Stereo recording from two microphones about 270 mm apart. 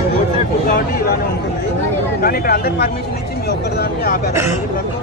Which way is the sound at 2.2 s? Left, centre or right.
Left.